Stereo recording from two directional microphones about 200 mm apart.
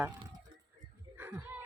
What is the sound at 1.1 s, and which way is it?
Music, 10° right (ahead or behind).